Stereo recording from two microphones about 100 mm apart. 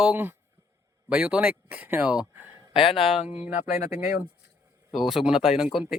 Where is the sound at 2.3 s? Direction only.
20° right (ahead or behind).